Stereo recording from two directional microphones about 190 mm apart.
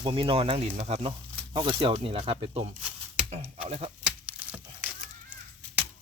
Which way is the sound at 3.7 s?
30° right (ahead or behind).